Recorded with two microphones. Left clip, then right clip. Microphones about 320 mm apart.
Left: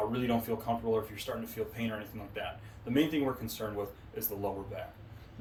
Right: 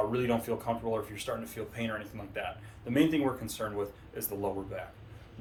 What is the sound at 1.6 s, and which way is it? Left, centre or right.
Speech, centre.